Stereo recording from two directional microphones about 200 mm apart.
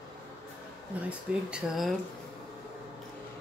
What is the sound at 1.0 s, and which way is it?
Speech, 5° right (ahead or behind).